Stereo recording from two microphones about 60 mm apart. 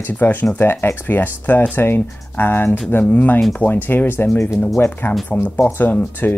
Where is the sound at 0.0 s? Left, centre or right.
Left.